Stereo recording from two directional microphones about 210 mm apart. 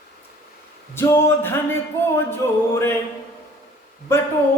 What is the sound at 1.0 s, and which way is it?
Speech, 10° left (ahead or behind).